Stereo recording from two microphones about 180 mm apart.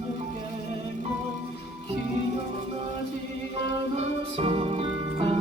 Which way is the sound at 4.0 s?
30° right (ahead or behind).